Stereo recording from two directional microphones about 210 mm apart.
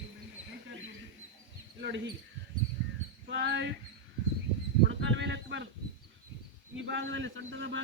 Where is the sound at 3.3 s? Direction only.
55° right (ahead or behind).